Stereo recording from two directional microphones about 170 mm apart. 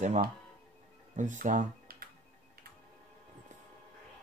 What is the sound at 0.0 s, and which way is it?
Speech, 45° right (ahead or behind).